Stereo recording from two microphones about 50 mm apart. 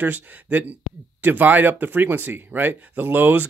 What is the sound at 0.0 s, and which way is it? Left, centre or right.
Speech, right.